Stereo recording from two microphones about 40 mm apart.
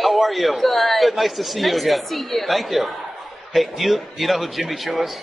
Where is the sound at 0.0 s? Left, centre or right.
Centre.